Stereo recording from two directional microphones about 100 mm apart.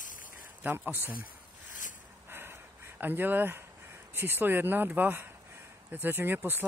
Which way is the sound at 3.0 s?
20° right (ahead or behind).